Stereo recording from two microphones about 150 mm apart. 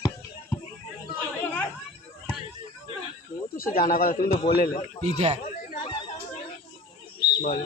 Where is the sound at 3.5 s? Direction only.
70° left (ahead or behind).